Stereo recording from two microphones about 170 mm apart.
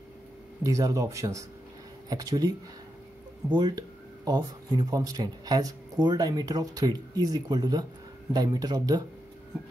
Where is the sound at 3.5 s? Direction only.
25° right (ahead or behind).